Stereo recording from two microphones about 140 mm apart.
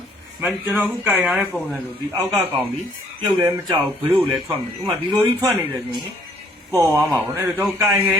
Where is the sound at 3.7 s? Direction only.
15° right (ahead or behind).